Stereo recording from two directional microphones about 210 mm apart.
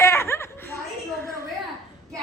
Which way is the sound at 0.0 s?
10° left (ahead or behind).